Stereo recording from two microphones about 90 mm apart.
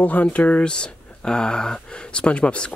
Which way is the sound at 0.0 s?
15° left (ahead or behind).